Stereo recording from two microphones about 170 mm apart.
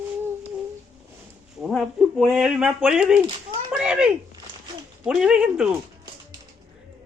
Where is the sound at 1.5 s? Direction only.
Centre (ahead or behind).